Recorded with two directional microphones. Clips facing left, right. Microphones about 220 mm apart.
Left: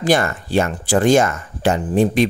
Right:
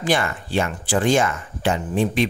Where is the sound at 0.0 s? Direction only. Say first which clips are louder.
Left 5 dB; 40° left (ahead or behind).